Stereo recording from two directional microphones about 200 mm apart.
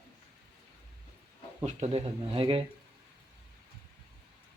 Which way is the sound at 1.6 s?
35° right (ahead or behind).